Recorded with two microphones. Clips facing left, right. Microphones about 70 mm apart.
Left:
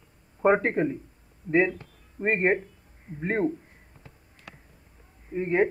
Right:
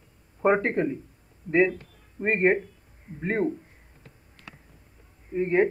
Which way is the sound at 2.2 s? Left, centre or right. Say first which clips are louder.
Right 1 dB; centre.